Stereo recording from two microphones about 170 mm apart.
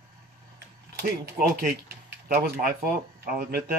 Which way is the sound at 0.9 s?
55° right (ahead or behind).